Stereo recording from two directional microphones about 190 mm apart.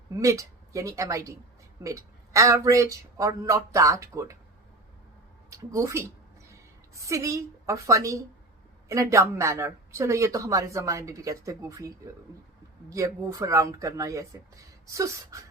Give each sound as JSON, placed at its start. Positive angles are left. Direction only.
{"t": 0.2, "sound": "speech", "side_deg": -15}
{"t": 5.5, "sound": "a woman's voice", "side_deg": -15}